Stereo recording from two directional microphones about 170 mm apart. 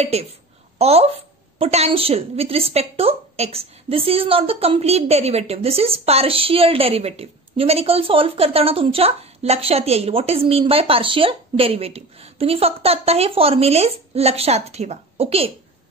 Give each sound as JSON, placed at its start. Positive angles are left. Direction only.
{"t": 0.0, "sound": "a woman's voice", "side_deg": -40}